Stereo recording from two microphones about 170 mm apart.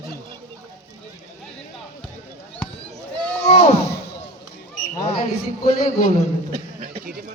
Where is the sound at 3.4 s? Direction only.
40° left (ahead or behind).